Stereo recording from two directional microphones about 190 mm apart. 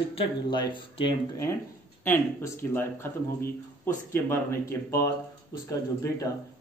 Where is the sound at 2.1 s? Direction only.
10° left (ahead or behind).